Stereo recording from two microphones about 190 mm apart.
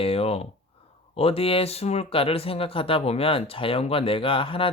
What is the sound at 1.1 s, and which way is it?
Speech, 30° left (ahead or behind).